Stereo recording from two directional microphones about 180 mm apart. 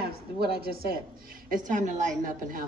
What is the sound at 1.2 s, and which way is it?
A woman's voice, 45° right (ahead or behind).